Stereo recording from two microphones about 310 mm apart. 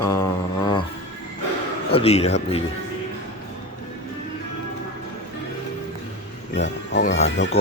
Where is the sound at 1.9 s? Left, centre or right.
Centre.